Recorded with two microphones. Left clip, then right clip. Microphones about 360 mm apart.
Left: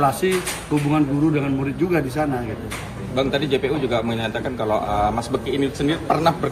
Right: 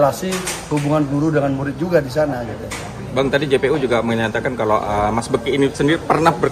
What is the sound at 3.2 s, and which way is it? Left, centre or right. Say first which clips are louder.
Speech: right 4 dB; right.